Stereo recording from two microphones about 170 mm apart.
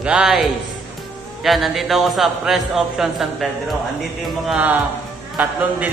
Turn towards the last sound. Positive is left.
turn(degrees=-10)  # may be behind; listen again after turning